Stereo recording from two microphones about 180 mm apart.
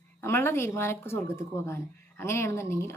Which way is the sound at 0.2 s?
15° left (ahead or behind).